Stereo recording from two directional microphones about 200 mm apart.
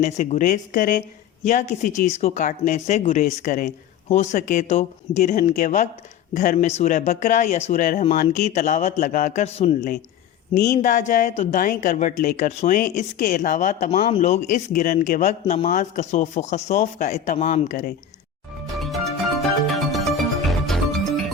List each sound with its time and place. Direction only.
0.0 s speech: 35° left (ahead or behind)
19.4 s music: centre (ahead or behind)